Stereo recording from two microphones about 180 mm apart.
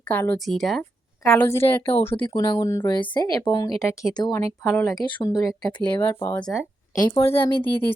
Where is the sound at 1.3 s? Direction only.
15° left (ahead or behind).